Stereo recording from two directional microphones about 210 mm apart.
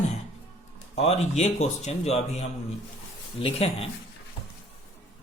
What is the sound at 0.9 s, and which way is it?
Speech, 30° left (ahead or behind).